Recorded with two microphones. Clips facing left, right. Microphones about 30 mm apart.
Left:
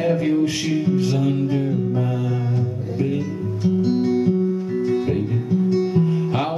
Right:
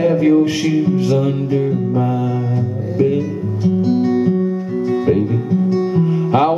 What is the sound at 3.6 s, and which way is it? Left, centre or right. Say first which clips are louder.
Music: right 4 dB; centre.